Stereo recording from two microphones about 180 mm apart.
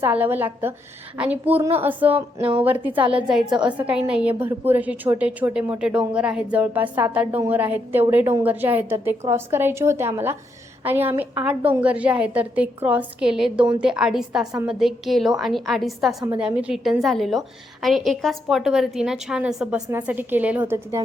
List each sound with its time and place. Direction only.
0.0 s a woman's voice: 10° right (ahead or behind)
2.1 s speech: 30° right (ahead or behind)
2.6 s a woman's voice: 10° right (ahead or behind)